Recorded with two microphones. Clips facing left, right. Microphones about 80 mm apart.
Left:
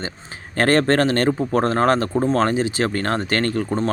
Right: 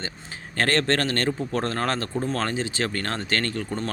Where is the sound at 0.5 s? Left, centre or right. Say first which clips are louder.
Left 6 dB; left.